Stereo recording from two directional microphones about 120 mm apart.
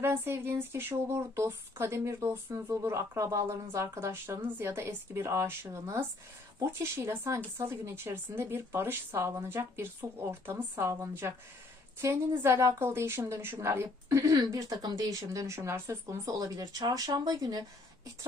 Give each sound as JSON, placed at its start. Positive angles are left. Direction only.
{"t": 0.0, "sound": "a woman's voice", "side_deg": -20}